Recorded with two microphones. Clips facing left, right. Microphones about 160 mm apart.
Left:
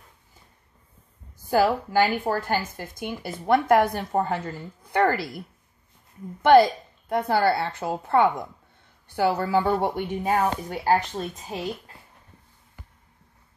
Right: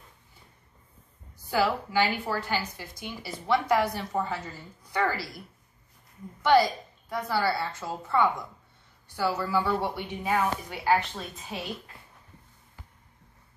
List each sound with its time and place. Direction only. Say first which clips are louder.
1.5 s a woman's voice: left 5 dB; 50° left (ahead or behind)
7.1 s a woman's voice: left 6 dB; 55° left (ahead or behind); by 11.5 s 40° left (ahead or behind)